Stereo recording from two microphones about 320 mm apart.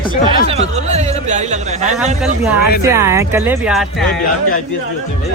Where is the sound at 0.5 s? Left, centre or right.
Centre.